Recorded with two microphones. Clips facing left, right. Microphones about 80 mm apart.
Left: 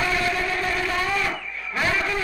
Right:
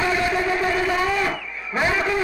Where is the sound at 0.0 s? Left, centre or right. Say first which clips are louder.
Right 3 dB; centre.